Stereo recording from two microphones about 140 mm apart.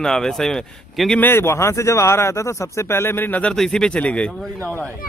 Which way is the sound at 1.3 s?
15° left (ahead or behind).